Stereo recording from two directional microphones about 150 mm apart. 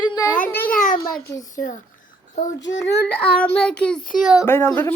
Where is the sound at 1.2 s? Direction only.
20° left (ahead or behind).